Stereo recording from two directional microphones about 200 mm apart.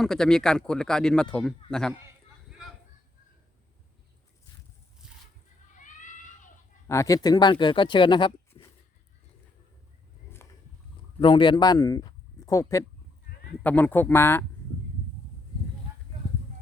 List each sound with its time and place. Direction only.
0.0 s speech: 5° left (ahead or behind)
2.5 s a sound: centre (ahead or behind)
5.0 s a sound: 5° right (ahead or behind)
5.7 s children playing: 40° left (ahead or behind)
6.8 s speech: 15° left (ahead or behind)
11.2 s speech: 25° left (ahead or behind)